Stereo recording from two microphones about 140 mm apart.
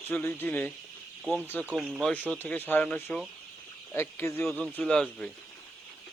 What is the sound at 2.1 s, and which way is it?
Speech, 10° left (ahead or behind).